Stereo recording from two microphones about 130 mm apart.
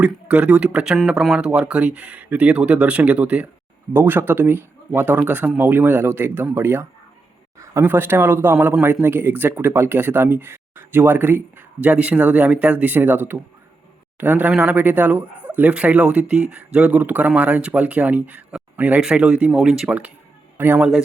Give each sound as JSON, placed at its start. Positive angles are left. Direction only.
{"t": 0.0, "sound": "speech", "side_deg": -10}